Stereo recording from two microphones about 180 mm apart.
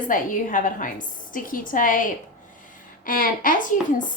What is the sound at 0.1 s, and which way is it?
A woman's voice, 50° left (ahead or behind).